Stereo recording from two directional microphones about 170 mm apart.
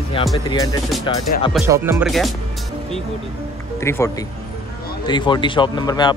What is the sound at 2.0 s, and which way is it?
Speech, centre (ahead or behind).